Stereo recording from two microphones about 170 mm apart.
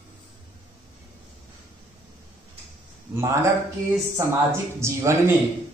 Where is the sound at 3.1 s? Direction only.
15° right (ahead or behind).